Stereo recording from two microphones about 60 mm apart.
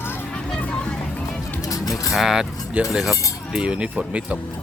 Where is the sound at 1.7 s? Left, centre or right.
Left.